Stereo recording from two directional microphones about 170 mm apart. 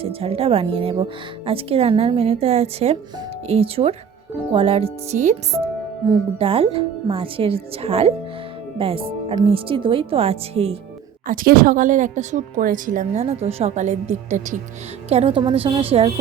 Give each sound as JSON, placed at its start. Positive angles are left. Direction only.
{"t": 0.0, "sound": "speech", "side_deg": -35}
{"t": 11.3, "sound": "speech", "side_deg": -60}
{"t": 15.1, "sound": "speech", "side_deg": -35}